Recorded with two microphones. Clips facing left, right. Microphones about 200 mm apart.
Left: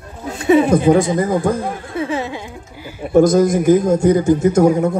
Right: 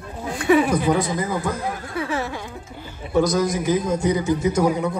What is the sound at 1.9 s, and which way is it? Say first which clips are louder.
Music: left 5 dB; 20° left (ahead or behind).